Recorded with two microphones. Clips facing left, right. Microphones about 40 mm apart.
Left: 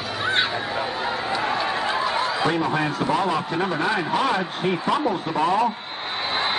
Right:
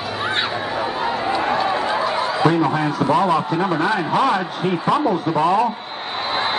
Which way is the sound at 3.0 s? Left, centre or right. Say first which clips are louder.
Right 7 dB; centre.